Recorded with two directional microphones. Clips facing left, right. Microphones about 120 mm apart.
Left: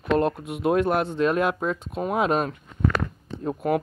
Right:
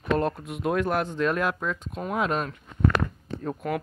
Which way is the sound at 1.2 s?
15° left (ahead or behind).